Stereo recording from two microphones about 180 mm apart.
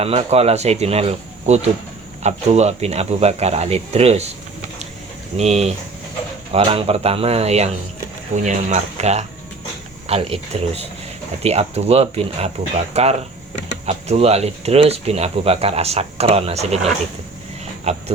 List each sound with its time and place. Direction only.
0.0 s speech: 35° right (ahead or behind)
5.4 s speech: 35° right (ahead or behind)